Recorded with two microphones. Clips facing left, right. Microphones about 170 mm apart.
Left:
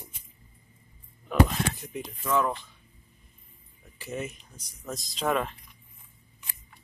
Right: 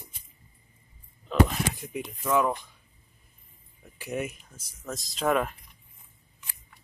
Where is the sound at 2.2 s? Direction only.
15° right (ahead or behind).